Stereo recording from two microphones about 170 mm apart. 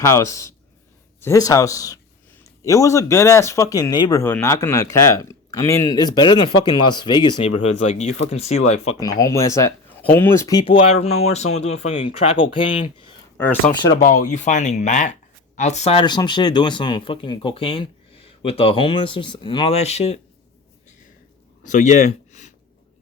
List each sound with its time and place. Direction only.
0.0 s speech: 15° left (ahead or behind)
7.6 s speech: 40° left (ahead or behind)
9.0 s speech: 20° left (ahead or behind)
10.7 s speech: 35° left (ahead or behind)
13.3 s speech: 10° left (ahead or behind)
14.0 s speech: 50° left (ahead or behind)
21.6 s speech: 45° left (ahead or behind)